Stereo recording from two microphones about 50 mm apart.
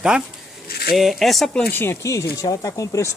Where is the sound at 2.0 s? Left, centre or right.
Left.